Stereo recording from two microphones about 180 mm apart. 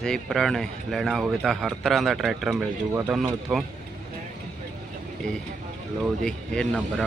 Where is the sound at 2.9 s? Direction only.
15° right (ahead or behind).